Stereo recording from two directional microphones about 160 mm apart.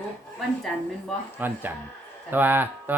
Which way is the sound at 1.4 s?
10° right (ahead or behind).